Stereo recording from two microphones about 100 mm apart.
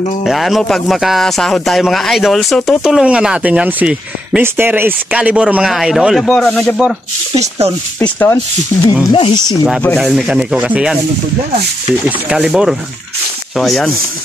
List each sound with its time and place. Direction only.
0.2 s a man's voice: centre (ahead or behind)
2.8 s speech: 5° right (ahead or behind)
4.4 s speech: 20° right (ahead or behind)
5.1 s speech: 10° right (ahead or behind)
6.2 s speech: 10° left (ahead or behind)
7.3 s speech: 90° right
8.0 s speech: 20° left (ahead or behind)
9.1 s speech: 45° left (ahead or behind)
9.9 s speech: 5° right (ahead or behind)
12.0 s a man's voice: 10° right (ahead or behind)